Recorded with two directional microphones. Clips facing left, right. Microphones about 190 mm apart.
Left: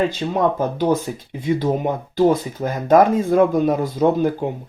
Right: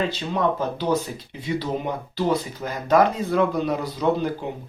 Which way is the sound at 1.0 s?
50° left (ahead or behind).